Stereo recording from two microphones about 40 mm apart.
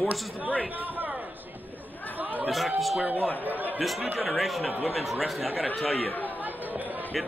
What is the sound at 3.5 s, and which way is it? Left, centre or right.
Speech, right.